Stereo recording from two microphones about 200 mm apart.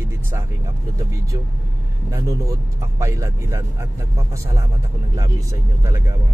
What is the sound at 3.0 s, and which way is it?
Speech, 15° right (ahead or behind).